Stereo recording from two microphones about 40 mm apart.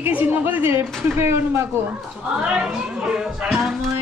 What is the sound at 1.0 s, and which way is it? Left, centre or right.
Speech, right.